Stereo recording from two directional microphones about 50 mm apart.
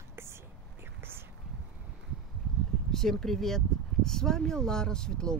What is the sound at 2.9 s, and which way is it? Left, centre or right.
Speech, centre.